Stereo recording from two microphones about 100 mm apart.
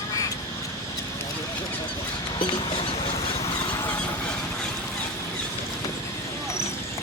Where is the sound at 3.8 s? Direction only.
20° left (ahead or behind).